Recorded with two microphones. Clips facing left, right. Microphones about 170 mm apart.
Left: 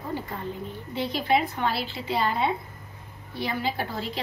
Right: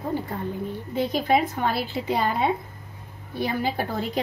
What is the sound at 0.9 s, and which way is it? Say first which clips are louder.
A woman's voice: right 3 dB; 45° right (ahead or behind).